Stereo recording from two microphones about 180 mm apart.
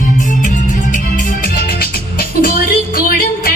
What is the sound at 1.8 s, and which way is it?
Music, 55° left (ahead or behind).